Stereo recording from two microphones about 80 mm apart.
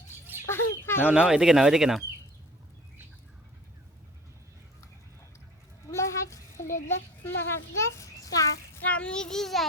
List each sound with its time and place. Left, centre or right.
0.4 s chicken: left
1.0 s speech: centre
5.9 s a sound: left
8.8 s a child's voice: centre